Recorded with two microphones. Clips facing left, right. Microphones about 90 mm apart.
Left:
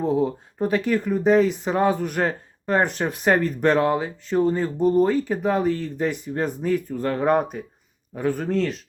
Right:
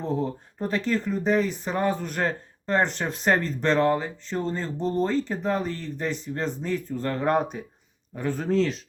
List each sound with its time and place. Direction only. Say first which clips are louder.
0.0 s speech: left 6 dB; 15° left (ahead or behind)